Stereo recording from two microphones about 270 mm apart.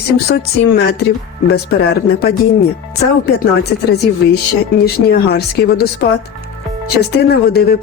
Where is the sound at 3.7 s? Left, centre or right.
Left.